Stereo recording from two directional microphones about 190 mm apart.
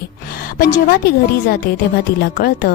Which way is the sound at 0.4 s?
45° left (ahead or behind).